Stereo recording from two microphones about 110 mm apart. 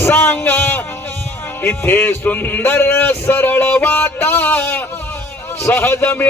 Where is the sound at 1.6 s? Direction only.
20° left (ahead or behind).